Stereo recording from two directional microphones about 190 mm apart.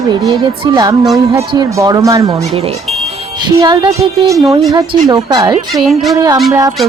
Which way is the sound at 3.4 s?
20° right (ahead or behind).